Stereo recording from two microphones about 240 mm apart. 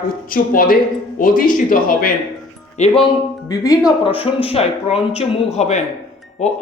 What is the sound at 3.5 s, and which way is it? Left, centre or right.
Speech, centre.